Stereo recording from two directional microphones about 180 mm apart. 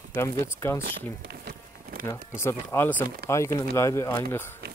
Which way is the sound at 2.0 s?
15° left (ahead or behind).